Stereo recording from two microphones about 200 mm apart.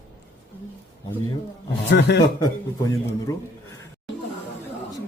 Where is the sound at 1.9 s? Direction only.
60° left (ahead or behind).